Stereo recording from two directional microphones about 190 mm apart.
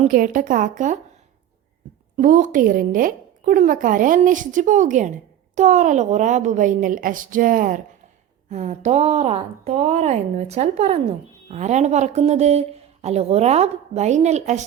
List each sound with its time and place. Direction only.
0.0 s speech: 45° right (ahead or behind)
2.1 s speech: 45° right (ahead or behind)